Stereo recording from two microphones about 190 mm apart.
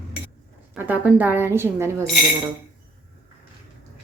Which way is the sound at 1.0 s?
10° right (ahead or behind).